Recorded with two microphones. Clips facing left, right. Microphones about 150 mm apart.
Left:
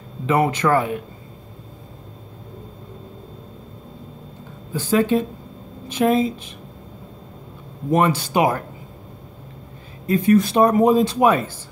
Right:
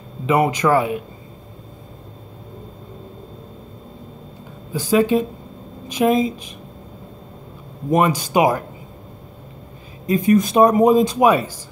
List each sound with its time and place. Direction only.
0.3 s speech: 15° right (ahead or behind)
4.7 s speech: 10° right (ahead or behind)
7.9 s speech: 15° right (ahead or behind)
10.0 s speech: 15° right (ahead or behind)